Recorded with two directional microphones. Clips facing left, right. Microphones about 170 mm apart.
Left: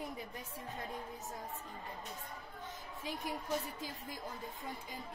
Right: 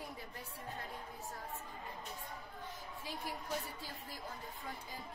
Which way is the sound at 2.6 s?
20° left (ahead or behind).